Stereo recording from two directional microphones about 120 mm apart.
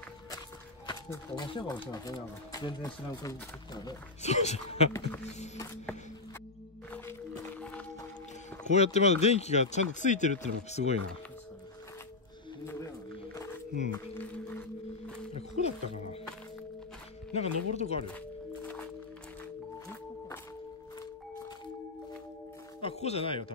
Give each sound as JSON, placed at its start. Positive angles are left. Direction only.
{"t": 1.3, "sound": "speech", "side_deg": 40}
{"t": 4.2, "sound": "speech", "side_deg": 70}
{"t": 8.6, "sound": "speech", "side_deg": 65}
{"t": 15.3, "sound": "music", "side_deg": 60}
{"t": 17.3, "sound": "speech", "side_deg": 60}
{"t": 22.8, "sound": "music", "side_deg": 55}